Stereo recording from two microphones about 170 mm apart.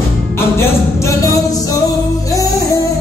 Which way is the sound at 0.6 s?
15° left (ahead or behind).